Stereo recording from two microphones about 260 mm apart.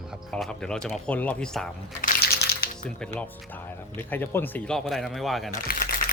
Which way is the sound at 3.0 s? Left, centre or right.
Centre.